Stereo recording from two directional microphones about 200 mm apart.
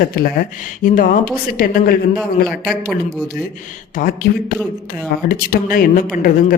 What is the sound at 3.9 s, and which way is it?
A woman's voice, 45° left (ahead or behind).